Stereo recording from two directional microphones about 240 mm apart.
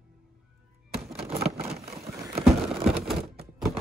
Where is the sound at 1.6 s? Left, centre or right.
Right.